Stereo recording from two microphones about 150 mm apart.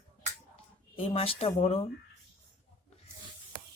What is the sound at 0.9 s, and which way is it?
Speech, 40° left (ahead or behind).